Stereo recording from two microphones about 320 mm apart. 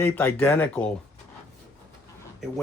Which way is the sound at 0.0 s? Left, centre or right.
Centre.